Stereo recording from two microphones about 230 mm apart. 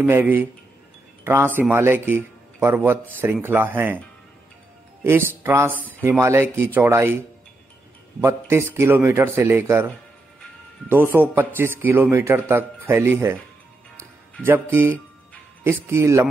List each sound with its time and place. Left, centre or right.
0.0 s speech: centre
5.0 s speech: centre
8.2 s speech: centre
14.4 s speech: centre